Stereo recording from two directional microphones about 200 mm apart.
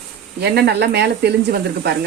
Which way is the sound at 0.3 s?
55° right (ahead or behind).